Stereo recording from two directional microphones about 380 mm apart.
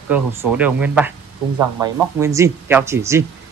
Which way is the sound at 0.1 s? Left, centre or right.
Centre.